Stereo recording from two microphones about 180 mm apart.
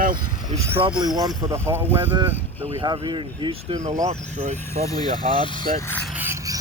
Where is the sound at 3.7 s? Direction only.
20° right (ahead or behind).